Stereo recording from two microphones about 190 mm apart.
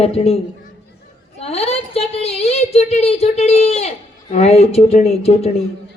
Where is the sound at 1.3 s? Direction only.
35° left (ahead or behind).